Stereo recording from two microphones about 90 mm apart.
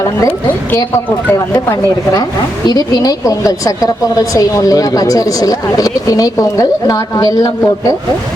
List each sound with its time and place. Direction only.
2.6 s a woman's voice: 50° left (ahead or behind)